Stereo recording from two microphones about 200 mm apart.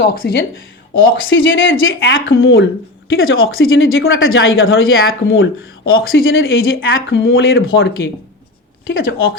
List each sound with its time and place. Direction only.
0.1 s speech: 50° left (ahead or behind)
1.1 s speech: 75° left (ahead or behind)
2.2 s speech: 85° left